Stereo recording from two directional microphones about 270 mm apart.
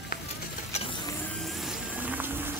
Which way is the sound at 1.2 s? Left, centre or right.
Centre.